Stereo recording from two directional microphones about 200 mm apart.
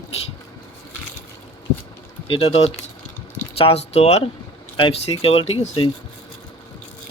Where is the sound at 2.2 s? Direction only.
30° left (ahead or behind).